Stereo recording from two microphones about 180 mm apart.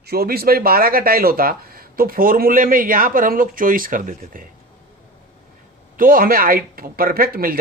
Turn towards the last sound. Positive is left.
turn(degrees=-55)  # may be behind; listen again after turning